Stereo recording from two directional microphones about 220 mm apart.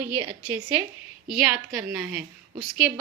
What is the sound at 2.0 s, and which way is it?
Speech, 5° right (ahead or behind).